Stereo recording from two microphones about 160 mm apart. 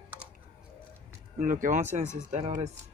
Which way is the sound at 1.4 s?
55° right (ahead or behind).